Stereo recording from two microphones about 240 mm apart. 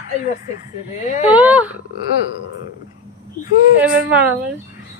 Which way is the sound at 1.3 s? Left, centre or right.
Centre.